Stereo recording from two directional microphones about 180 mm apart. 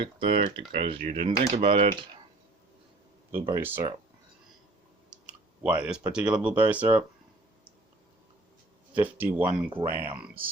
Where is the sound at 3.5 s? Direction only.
15° right (ahead or behind).